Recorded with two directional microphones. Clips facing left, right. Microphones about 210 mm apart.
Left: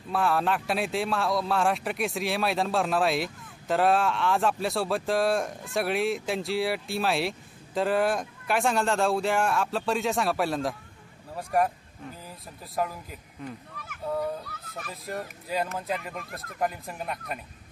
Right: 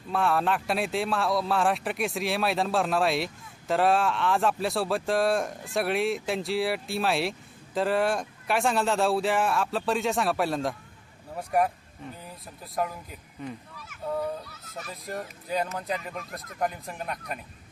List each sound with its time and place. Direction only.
0.1 s speech: centre (ahead or behind)
13.7 s a sound: 55° left (ahead or behind)
14.0 s speech: centre (ahead or behind)